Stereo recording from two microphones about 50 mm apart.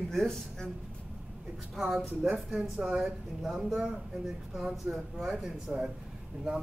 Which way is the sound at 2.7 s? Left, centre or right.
Centre.